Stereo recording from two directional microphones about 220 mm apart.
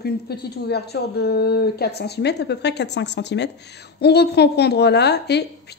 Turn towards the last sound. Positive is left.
turn(degrees=50)  # may be behind; listen again after turning